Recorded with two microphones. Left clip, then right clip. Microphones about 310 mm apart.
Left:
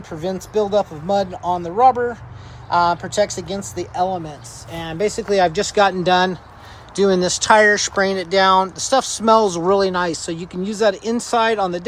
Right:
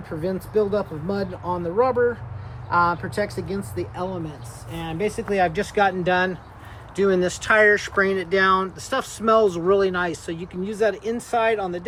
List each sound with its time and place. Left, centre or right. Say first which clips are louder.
0.2 s speech: left 2 dB; centre